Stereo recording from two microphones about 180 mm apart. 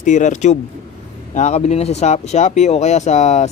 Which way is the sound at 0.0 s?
40° left (ahead or behind).